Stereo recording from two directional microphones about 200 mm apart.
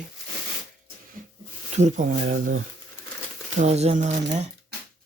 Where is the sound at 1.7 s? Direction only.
35° right (ahead or behind).